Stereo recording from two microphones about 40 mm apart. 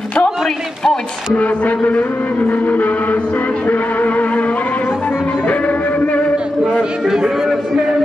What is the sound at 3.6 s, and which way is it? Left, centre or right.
Music, left.